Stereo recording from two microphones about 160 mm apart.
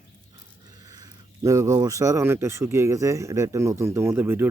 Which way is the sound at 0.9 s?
20° right (ahead or behind).